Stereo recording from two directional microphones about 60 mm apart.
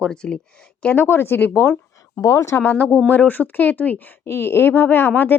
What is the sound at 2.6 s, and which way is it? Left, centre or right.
Speech, left.